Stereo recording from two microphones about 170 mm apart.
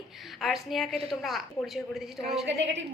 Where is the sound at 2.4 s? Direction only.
90° right.